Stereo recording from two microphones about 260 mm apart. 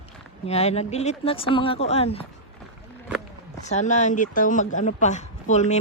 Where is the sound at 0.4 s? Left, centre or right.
Left.